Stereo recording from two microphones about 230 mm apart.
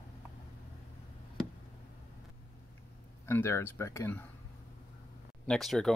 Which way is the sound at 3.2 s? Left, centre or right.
Centre.